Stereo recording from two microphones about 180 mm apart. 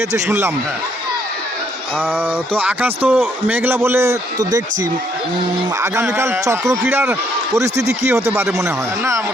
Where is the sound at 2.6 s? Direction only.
10° right (ahead or behind).